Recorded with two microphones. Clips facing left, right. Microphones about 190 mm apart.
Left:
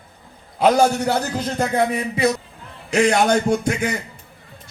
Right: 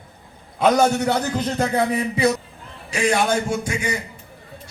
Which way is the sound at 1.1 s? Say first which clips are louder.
Even; 5° left (ahead or behind).